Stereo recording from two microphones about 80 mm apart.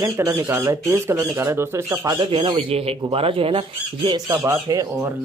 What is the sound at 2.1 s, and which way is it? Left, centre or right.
Speech, right.